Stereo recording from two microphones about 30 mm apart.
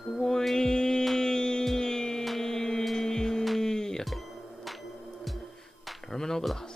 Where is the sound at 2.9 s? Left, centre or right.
Centre.